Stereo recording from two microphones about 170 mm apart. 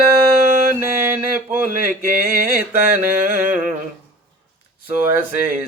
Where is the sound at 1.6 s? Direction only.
55° right (ahead or behind).